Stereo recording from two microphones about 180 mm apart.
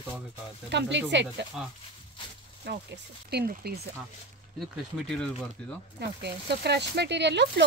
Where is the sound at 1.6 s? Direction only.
5° right (ahead or behind).